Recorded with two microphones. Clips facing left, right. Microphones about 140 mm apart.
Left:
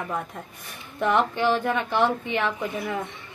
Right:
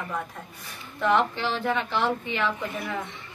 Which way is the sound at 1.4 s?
50° left (ahead or behind).